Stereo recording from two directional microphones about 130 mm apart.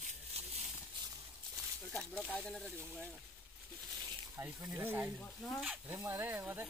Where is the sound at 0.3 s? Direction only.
50° right (ahead or behind).